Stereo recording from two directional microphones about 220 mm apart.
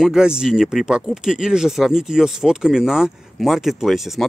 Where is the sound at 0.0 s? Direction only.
5° right (ahead or behind).